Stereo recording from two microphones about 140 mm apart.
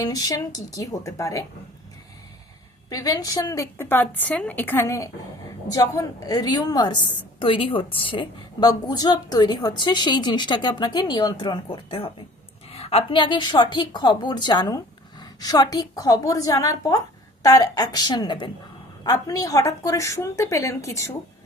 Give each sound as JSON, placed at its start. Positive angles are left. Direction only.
{"t": 0.0, "sound": "a woman's voice", "side_deg": 25}
{"t": 2.9, "sound": "a woman's voice", "side_deg": 25}